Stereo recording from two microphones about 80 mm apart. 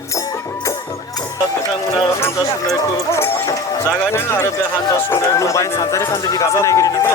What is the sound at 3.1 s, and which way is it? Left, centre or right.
Run, left.